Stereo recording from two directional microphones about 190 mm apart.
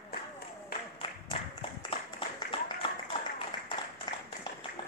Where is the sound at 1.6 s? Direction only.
25° left (ahead or behind).